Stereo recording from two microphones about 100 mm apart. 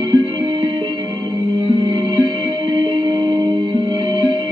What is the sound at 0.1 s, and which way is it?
Music, 55° right (ahead or behind).